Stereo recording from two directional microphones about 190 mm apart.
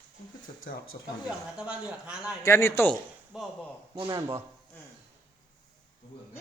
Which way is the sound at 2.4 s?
15° left (ahead or behind).